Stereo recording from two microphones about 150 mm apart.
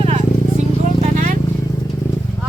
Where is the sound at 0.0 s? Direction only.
45° right (ahead or behind).